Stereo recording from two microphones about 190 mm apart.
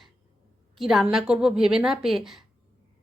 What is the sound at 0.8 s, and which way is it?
A woman's voice, centre (ahead or behind).